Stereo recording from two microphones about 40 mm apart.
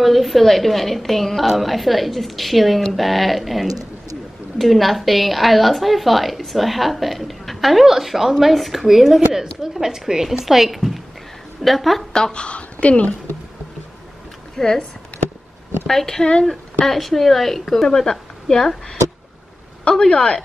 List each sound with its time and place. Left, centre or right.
0.0 s a woman's voice: centre
12.1 s a woman's voice: left
14.6 s a woman's voice: centre
15.9 s a woman's voice: centre
19.8 s speech: left